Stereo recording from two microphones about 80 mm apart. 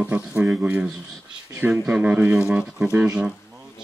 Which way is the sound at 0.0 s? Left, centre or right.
Centre.